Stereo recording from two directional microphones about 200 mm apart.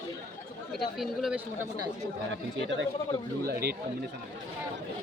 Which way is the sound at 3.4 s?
50° right (ahead or behind).